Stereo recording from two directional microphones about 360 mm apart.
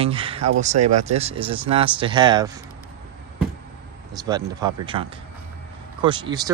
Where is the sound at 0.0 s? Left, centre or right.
Centre.